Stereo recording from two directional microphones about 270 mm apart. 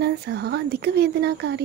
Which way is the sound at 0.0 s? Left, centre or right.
Right.